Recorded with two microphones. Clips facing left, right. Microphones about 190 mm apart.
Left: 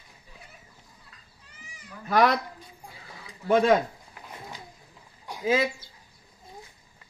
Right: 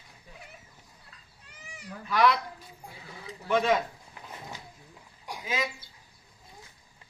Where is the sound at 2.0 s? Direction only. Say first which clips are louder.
Left 3 dB; 45° left (ahead or behind).